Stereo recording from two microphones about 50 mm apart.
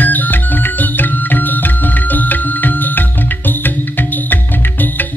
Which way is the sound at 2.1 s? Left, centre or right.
Left.